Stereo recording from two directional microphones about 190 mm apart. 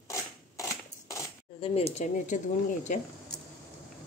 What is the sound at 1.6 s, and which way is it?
Speech, 30° left (ahead or behind).